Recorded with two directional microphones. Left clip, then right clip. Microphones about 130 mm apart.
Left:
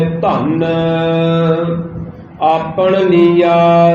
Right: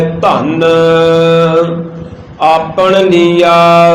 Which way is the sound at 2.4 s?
25° right (ahead or behind).